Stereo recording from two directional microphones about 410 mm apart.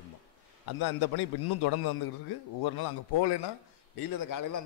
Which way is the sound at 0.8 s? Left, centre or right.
Left.